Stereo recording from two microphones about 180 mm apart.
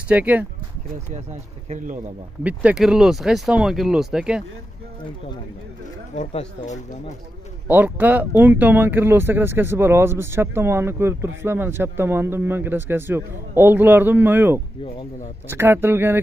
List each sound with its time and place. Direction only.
0.1 s speech: 10° right (ahead or behind)
1.1 s speech: 40° right (ahead or behind)
2.4 s speech: 5° right (ahead or behind)
6.1 s speech: 40° left (ahead or behind)
7.6 s speech: 10° right (ahead or behind)